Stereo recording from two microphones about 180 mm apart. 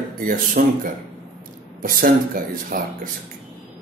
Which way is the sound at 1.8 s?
50° right (ahead or behind).